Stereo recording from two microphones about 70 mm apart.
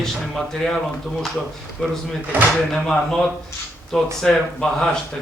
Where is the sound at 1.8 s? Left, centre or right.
Centre.